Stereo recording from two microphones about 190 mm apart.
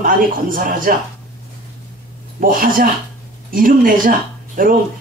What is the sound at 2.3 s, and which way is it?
Speech, 45° right (ahead or behind).